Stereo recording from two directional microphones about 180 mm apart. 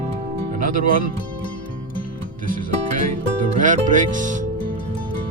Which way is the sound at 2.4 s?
50° right (ahead or behind).